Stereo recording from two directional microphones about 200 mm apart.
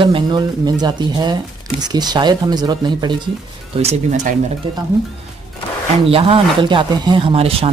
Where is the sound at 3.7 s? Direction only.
35° right (ahead or behind).